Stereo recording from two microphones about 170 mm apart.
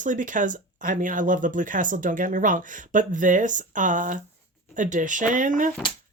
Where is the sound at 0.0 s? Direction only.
50° right (ahead or behind).